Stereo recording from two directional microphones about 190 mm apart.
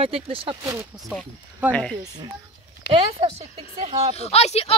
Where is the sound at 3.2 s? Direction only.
30° right (ahead or behind).